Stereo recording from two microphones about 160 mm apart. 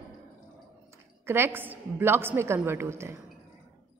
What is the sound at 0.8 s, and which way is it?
A woman's voice, 15° right (ahead or behind).